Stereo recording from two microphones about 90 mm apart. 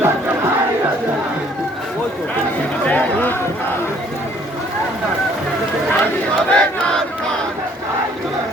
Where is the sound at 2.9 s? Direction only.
20° left (ahead or behind).